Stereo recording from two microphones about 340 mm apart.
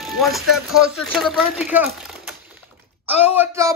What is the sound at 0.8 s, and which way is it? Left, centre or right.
Speech, centre.